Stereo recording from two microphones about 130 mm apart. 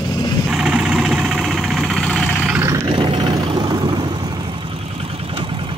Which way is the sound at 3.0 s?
40° right (ahead or behind).